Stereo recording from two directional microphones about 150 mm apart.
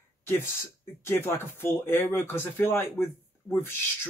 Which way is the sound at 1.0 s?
15° left (ahead or behind).